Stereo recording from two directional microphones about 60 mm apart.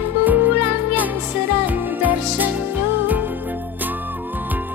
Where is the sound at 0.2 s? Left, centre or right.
Right.